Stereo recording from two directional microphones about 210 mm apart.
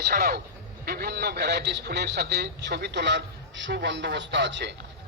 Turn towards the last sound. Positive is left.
turn(degrees=-55)  # may be behind; listen again after turning